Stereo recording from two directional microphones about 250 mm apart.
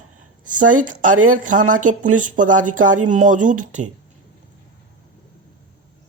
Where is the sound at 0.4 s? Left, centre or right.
Right.